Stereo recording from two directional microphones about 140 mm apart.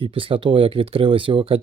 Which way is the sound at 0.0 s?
40° right (ahead or behind).